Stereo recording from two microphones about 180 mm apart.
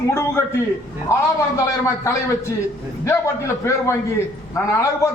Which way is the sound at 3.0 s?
15° left (ahead or behind).